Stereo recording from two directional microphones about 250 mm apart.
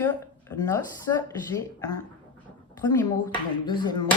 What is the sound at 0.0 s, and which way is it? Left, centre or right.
Speech, centre.